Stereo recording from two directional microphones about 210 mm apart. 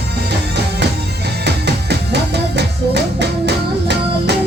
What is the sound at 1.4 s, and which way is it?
Music, 55° right (ahead or behind).